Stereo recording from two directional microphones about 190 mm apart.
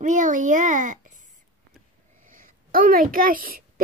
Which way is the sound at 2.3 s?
45° right (ahead or behind).